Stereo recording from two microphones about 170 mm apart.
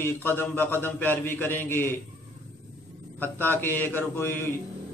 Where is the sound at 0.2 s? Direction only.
10° left (ahead or behind).